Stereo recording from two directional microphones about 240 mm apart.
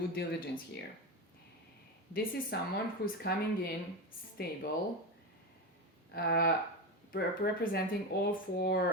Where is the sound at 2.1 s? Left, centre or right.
Left.